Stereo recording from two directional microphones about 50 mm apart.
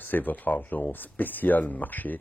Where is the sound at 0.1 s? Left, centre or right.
Left.